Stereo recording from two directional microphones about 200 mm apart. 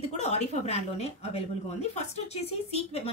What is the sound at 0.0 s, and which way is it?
A woman's voice, 30° left (ahead or behind).